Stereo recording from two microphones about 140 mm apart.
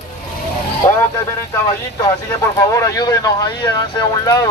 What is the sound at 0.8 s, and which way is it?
Speech, 20° left (ahead or behind).